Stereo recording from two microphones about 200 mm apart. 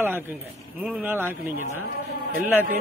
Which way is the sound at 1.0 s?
10° right (ahead or behind).